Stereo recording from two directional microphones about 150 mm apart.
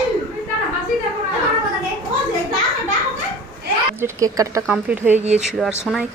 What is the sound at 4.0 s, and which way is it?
Speech, 25° right (ahead or behind).